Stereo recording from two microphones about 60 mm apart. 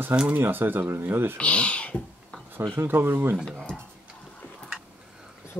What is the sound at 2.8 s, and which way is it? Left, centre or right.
Speech, right.